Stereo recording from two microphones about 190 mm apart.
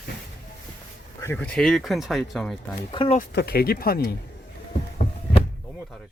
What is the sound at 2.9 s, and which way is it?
Speech, 25° left (ahead or behind).